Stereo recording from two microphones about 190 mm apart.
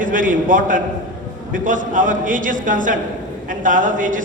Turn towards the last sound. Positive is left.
turn(degrees=-45)  # may be behind; listen again after turning